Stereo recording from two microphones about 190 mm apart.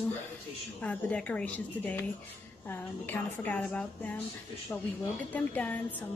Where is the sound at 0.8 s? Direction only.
5° left (ahead or behind).